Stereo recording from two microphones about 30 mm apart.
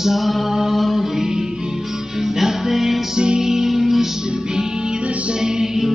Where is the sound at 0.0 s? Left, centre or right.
Centre.